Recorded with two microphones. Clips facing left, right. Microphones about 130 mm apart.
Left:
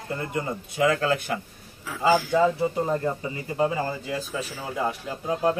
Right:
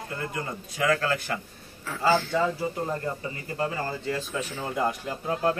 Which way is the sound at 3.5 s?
20° left (ahead or behind).